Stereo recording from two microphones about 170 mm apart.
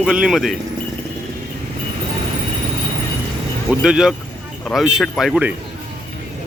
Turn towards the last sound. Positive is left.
turn(degrees=-5)  # may be behind; listen again after turning